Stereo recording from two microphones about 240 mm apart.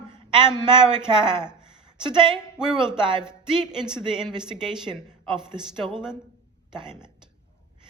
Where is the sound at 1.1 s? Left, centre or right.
Centre.